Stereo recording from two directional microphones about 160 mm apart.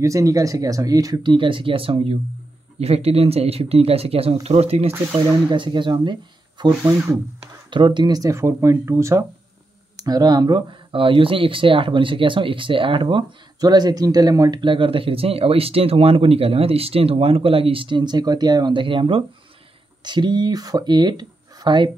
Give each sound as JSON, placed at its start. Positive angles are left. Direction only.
{"t": 0.0, "sound": "speech", "side_deg": -20}
{"t": 5.5, "sound": "speech", "side_deg": -30}
{"t": 6.8, "sound": "speech", "side_deg": -15}
{"t": 7.7, "sound": "speech", "side_deg": -30}